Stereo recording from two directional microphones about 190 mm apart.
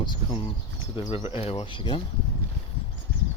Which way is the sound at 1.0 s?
30° left (ahead or behind).